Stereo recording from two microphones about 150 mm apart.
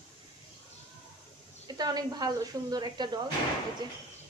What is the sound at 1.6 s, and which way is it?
Speech, 25° right (ahead or behind).